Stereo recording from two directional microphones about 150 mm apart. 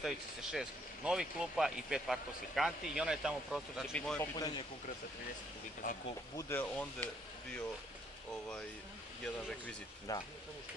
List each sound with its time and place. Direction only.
0.0 s speech: centre (ahead or behind)
4.2 s speech: 25° left (ahead or behind)
5.8 s speech: 65° left (ahead or behind)
6.3 s speech: 15° left (ahead or behind)
10.1 s speech: 25° left (ahead or behind)